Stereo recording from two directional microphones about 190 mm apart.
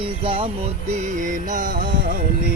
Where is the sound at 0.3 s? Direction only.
30° right (ahead or behind); by 2.1 s 45° right (ahead or behind).